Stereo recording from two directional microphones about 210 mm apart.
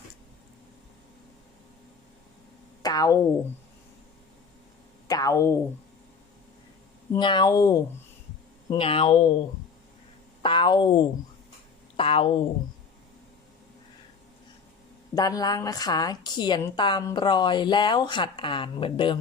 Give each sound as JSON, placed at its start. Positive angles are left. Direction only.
{"t": 2.8, "sound": "speech", "side_deg": 15}
{"t": 5.0, "sound": "speech", "side_deg": 15}
{"t": 7.1, "sound": "a woman's voice", "side_deg": 20}
{"t": 10.4, "sound": "a woman's voice", "side_deg": 20}
{"t": 15.1, "sound": "a woman's voice", "side_deg": 20}